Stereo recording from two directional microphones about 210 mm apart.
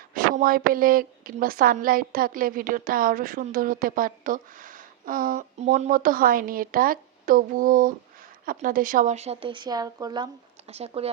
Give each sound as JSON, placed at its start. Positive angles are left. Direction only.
{"t": 0.1, "sound": "a woman's voice", "side_deg": -45}
{"t": 10.7, "sound": "a woman's voice", "side_deg": -30}